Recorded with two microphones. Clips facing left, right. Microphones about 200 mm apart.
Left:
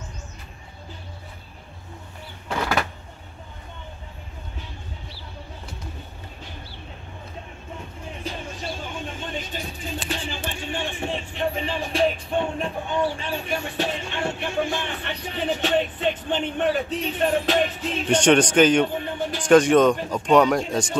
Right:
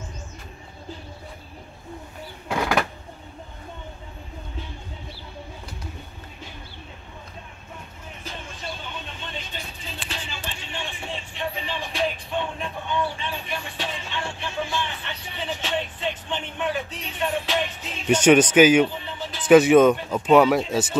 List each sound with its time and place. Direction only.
2.4 s a sound: 10° right (ahead or behind)
8.9 s music: 45° left (ahead or behind)
18.0 s speech: 5° right (ahead or behind)
18.9 s music: 55° left (ahead or behind)
19.4 s speech: 5° right (ahead or behind)